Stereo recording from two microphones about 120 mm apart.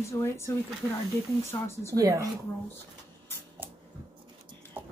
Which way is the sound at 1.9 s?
30° right (ahead or behind).